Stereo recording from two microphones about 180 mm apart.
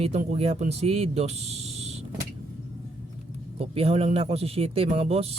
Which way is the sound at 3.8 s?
35° right (ahead or behind).